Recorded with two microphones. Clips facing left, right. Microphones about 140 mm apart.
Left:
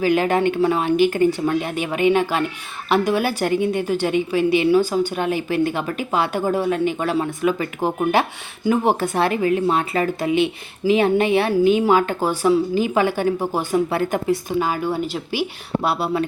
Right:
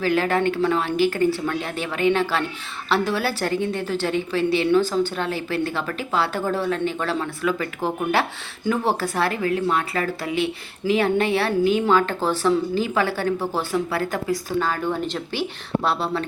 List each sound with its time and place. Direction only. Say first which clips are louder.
0.0 s speech: left 3 dB; 15° left (ahead or behind)